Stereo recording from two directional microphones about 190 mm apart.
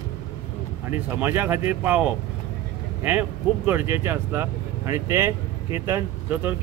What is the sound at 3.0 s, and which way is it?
Speech, 10° right (ahead or behind).